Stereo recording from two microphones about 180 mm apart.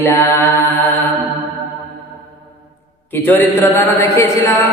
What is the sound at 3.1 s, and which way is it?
Speech, 10° left (ahead or behind).